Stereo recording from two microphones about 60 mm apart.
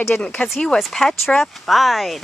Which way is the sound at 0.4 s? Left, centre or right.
Left.